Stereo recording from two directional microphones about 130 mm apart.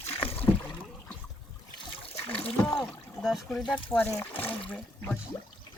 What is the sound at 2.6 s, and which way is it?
Speech, 5° left (ahead or behind).